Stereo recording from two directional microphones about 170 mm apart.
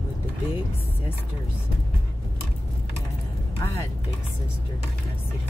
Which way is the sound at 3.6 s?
20° left (ahead or behind).